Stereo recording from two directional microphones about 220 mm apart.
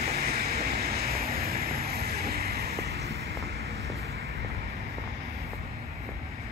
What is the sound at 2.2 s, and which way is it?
Vehicle, 45° right (ahead or behind).